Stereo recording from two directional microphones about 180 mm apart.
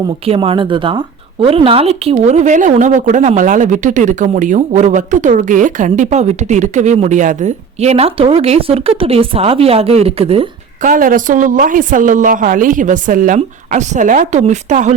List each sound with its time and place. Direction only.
0.3 s speech: 30° right (ahead or behind)
10.8 s a woman's voice: 50° right (ahead or behind)